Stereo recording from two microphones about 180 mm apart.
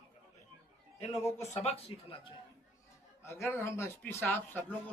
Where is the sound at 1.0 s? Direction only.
35° left (ahead or behind).